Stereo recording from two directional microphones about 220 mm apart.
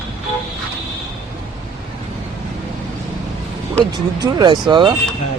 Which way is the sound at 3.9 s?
20° right (ahead or behind).